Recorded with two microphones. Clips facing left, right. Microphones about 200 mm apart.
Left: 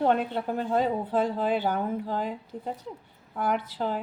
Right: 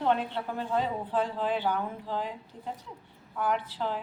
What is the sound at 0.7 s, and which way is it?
Speech, 40° left (ahead or behind).